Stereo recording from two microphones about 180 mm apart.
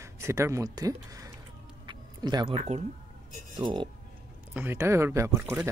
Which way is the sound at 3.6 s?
25° right (ahead or behind).